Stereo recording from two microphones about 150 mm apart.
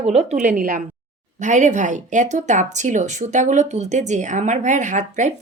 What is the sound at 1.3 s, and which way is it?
Speech, 55° right (ahead or behind).